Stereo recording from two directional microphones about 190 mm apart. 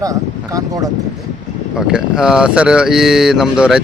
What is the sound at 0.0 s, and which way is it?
Speech, 20° right (ahead or behind).